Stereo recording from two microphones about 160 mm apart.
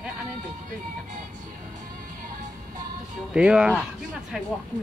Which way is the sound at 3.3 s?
5° right (ahead or behind).